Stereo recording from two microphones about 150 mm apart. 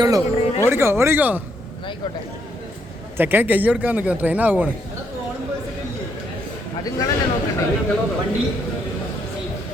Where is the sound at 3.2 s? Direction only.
15° right (ahead or behind).